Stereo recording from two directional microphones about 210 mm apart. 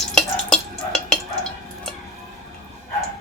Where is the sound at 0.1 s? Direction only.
5° left (ahead or behind).